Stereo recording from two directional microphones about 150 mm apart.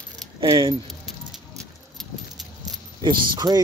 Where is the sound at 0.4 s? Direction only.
25° right (ahead or behind).